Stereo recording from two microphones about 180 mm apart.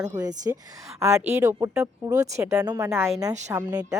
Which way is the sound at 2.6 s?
20° right (ahead or behind).